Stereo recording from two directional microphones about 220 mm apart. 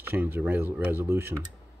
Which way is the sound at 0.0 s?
10° right (ahead or behind).